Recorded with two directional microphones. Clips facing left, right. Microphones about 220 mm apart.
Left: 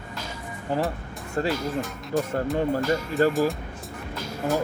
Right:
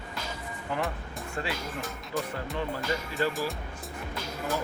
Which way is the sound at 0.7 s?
35° left (ahead or behind).